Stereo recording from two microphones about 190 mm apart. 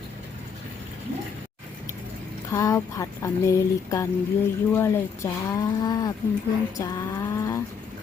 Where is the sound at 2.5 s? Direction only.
15° left (ahead or behind).